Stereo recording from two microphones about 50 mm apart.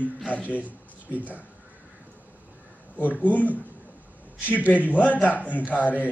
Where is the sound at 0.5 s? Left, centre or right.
Right.